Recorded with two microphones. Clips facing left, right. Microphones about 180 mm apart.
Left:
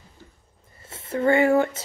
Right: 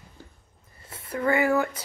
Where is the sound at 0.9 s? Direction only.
25° left (ahead or behind).